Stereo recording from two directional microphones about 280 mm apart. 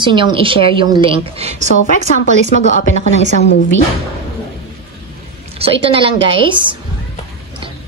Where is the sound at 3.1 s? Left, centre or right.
Right.